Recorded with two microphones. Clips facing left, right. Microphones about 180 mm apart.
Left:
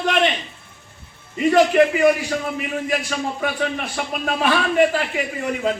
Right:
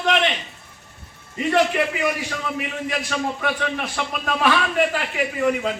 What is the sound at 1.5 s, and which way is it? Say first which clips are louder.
Speech: left 5 dB; 45° left (ahead or behind).